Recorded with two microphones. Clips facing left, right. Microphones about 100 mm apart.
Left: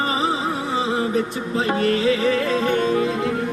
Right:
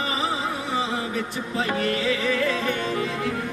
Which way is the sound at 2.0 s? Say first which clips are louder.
Left 5 dB; 25° left (ahead or behind).